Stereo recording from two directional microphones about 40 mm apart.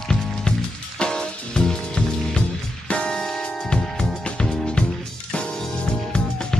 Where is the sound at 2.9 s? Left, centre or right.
Left.